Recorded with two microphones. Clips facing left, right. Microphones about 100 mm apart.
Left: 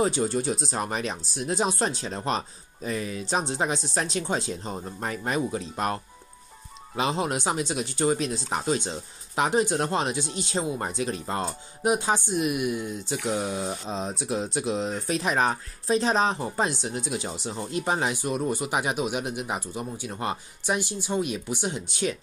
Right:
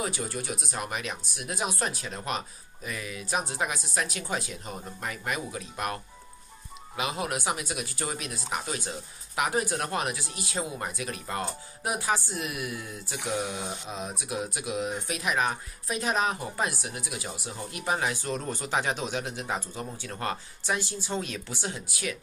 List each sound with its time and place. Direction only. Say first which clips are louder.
0.0 s speech: left 8 dB; 30° left (ahead or behind)
7.0 s speech: left 5 dB; 30° left (ahead or behind)